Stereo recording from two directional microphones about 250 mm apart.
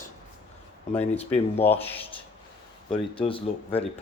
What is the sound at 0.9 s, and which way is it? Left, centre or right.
Speech, left.